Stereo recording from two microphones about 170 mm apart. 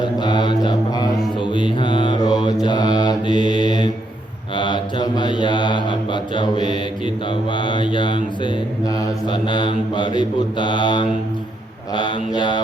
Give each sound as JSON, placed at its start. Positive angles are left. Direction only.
{"t": 0.0, "sound": "mantra", "side_deg": 25}